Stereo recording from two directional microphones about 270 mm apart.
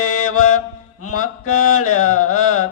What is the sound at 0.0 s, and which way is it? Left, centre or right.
Mantra, left.